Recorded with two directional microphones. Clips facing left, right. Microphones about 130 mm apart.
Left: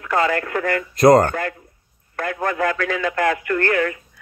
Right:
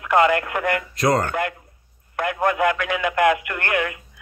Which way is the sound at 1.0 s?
40° left (ahead or behind).